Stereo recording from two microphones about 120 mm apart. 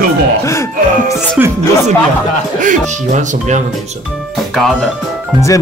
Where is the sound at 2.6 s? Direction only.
90° right.